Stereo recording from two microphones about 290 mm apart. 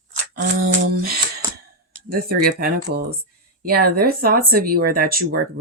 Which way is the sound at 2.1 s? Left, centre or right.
Right.